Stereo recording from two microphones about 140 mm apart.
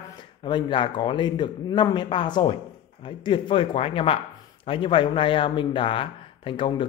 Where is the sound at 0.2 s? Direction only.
35° left (ahead or behind).